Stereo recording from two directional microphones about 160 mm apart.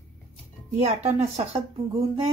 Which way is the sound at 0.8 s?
40° right (ahead or behind).